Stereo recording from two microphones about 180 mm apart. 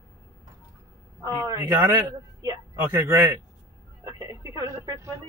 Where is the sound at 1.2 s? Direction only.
20° right (ahead or behind).